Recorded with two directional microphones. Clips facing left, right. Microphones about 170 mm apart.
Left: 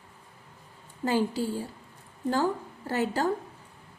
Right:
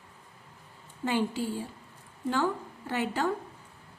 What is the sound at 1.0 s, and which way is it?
A woman's voice, 40° left (ahead or behind).